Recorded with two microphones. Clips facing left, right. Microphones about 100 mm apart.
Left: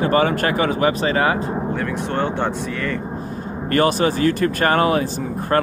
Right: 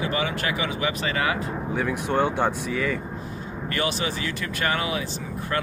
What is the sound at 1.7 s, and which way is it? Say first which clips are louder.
Speech: left 2 dB; 5° right (ahead or behind).